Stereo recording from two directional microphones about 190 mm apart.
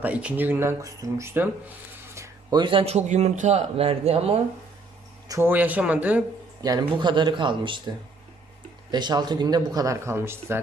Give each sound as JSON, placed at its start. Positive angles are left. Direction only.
{"t": 0.0, "sound": "speech", "side_deg": -5}
{"t": 5.3, "sound": "speech", "side_deg": -10}
{"t": 6.6, "sound": "speech", "side_deg": -20}
{"t": 8.9, "sound": "speech", "side_deg": -20}